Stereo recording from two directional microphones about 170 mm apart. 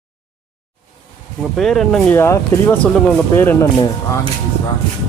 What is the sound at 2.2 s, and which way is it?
Speech, 15° left (ahead or behind).